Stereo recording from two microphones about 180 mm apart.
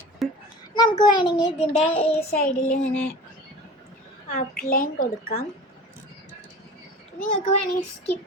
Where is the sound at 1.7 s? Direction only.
30° left (ahead or behind).